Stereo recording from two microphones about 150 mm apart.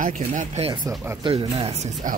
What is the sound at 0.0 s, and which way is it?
Speech, 60° right (ahead or behind).